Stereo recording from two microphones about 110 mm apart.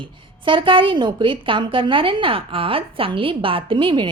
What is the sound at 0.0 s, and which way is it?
A woman's voice, 50° right (ahead or behind).